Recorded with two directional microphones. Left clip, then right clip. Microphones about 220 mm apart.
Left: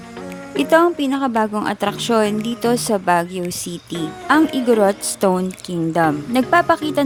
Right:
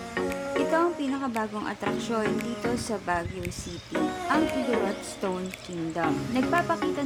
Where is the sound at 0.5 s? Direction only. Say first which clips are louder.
Left 11 dB; 40° left (ahead or behind).